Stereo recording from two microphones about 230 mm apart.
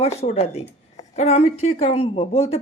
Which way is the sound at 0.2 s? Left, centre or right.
Left.